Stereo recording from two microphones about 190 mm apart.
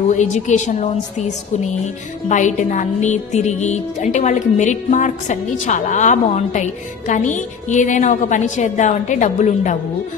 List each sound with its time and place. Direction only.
0.1 s music: 40° left (ahead or behind)